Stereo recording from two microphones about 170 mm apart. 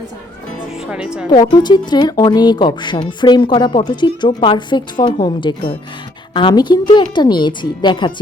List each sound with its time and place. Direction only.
0.9 s speech: 5° right (ahead or behind)
1.3 s speech: 25° left (ahead or behind)